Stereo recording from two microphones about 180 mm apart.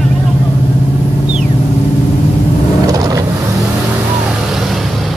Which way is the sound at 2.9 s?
20° right (ahead or behind).